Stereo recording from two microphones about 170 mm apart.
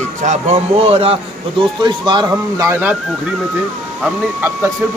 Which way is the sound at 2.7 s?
10° right (ahead or behind).